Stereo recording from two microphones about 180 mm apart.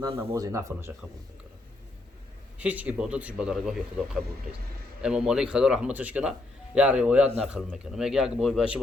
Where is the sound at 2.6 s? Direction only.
10° right (ahead or behind).